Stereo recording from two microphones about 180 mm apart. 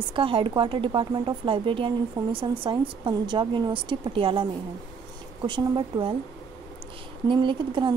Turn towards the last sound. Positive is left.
turn(degrees=-25)  # may be behind; listen again after turning